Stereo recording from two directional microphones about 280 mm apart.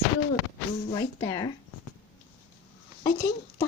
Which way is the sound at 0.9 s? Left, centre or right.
Centre.